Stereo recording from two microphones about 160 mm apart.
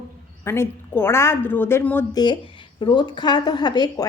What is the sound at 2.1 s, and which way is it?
A woman's voice, 30° left (ahead or behind).